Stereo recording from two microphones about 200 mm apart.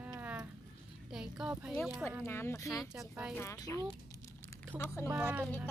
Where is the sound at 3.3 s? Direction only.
15° left (ahead or behind).